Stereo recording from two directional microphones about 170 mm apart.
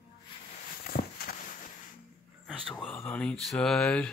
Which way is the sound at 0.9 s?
65° left (ahead or behind).